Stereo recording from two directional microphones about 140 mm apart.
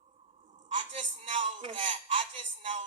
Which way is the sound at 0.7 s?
45° right (ahead or behind).